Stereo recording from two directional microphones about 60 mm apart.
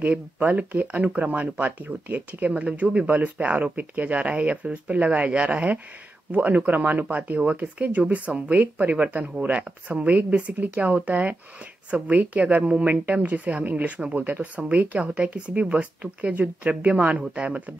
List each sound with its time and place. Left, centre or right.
0.0 s speech: right